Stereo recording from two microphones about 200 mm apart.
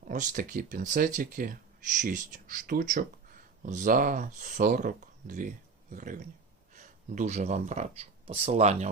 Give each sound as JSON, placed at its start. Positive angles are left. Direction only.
{"t": 0.1, "sound": "speech", "side_deg": -40}